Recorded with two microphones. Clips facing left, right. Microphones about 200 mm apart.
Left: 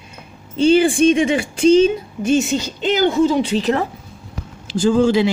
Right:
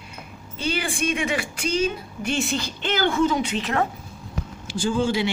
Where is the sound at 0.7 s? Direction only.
30° left (ahead or behind).